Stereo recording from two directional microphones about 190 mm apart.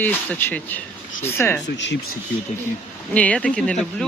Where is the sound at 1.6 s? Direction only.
65° left (ahead or behind).